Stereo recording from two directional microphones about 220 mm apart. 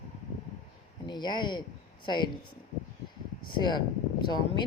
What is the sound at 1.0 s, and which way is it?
Speech, 20° left (ahead or behind).